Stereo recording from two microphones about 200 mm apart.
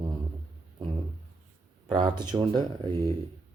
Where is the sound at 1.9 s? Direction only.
20° right (ahead or behind).